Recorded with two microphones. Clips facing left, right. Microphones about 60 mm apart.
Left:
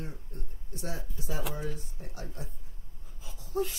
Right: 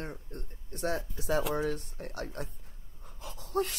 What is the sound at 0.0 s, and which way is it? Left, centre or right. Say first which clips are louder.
Speech: right 2 dB; right.